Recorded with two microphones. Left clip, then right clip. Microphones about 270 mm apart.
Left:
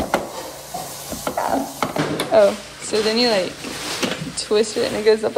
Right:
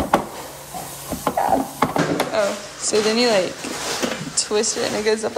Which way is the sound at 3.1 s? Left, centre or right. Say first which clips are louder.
Left 1 dB; centre.